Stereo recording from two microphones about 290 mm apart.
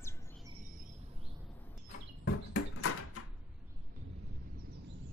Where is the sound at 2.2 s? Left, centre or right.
Left.